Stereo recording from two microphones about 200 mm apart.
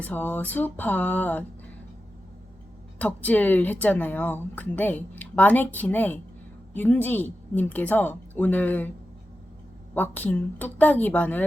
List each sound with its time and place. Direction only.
0.0 s speech: 10° left (ahead or behind)
3.0 s speech: 5° left (ahead or behind)
9.9 s speech: 10° left (ahead or behind)